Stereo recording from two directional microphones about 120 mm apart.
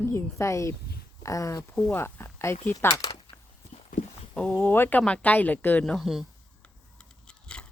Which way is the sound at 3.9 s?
90° left.